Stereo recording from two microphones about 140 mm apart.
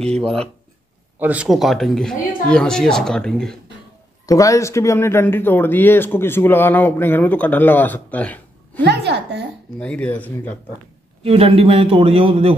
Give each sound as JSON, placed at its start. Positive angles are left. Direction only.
{"t": 0.0, "sound": "speech", "side_deg": 5}
{"t": 1.2, "sound": "speech", "side_deg": -10}
{"t": 4.3, "sound": "speech", "side_deg": 25}
{"t": 11.2, "sound": "a man's voice", "side_deg": -45}